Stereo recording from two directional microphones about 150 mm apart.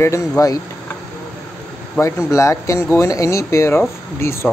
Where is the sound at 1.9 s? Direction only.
20° left (ahead or behind).